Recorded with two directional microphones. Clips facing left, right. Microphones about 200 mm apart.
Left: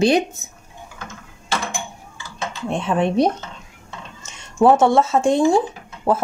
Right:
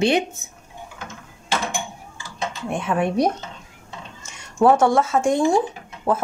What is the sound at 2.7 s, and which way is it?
Speech, 25° left (ahead or behind).